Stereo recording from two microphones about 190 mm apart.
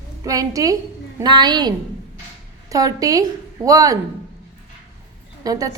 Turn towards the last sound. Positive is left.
turn(degrees=-20)  # may be behind; listen again after turning